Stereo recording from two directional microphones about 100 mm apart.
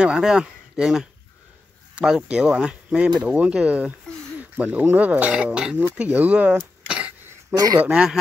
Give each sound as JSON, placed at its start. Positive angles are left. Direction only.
{"t": 0.0, "sound": "speech", "side_deg": -10}